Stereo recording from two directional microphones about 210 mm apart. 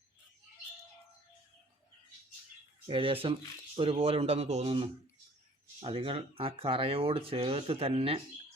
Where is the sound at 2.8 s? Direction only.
25° right (ahead or behind).